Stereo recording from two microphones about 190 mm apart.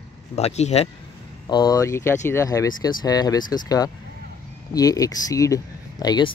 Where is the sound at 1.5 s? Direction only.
20° left (ahead or behind).